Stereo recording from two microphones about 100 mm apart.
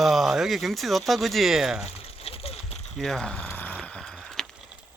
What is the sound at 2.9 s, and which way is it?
Speech, 5° left (ahead or behind).